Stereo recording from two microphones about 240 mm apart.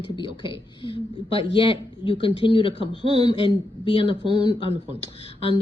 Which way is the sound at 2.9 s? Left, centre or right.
Right.